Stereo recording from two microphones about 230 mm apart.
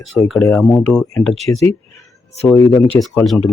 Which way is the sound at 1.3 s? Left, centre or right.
Right.